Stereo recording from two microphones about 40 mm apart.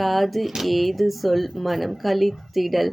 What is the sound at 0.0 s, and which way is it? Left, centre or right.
Speech, centre.